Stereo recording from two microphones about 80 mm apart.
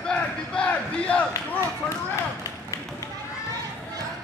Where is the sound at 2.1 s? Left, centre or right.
Left.